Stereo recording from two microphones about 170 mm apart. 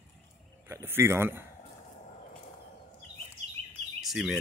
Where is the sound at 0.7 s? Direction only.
15° right (ahead or behind).